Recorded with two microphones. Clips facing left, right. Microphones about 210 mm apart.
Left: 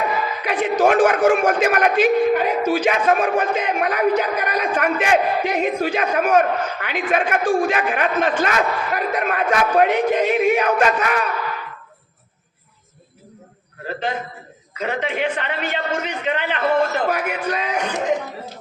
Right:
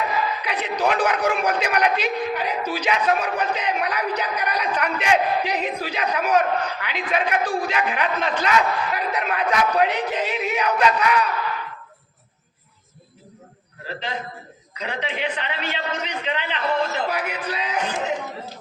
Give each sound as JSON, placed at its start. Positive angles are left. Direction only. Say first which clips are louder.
{"t": 0.4, "sound": "a man's voice", "louder": "left 9 dB", "side_deg": 50}
{"t": 13.8, "sound": "a man's voice", "louder": "left 5 dB", "side_deg": 50}